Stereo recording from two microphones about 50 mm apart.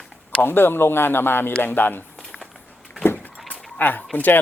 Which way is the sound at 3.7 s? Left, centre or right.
Left.